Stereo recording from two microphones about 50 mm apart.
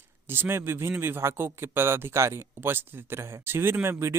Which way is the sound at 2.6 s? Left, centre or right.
Right.